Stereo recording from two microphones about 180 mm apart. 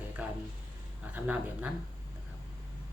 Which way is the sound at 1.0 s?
5° right (ahead or behind).